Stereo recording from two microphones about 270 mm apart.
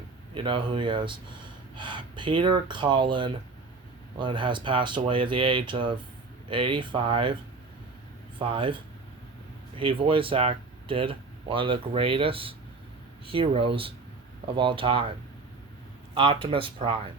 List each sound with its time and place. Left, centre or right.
0.3 s speech: centre
8.4 s speech: centre
16.1 s speech: centre